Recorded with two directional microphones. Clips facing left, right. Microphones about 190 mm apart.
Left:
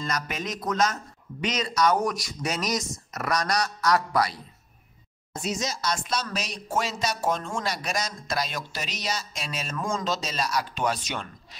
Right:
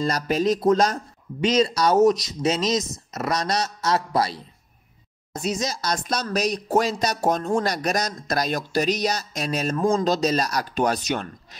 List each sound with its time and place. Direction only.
0.0 s speech: 35° right (ahead or behind)